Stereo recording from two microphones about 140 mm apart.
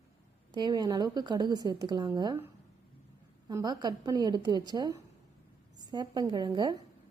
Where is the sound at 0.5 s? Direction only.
30° right (ahead or behind).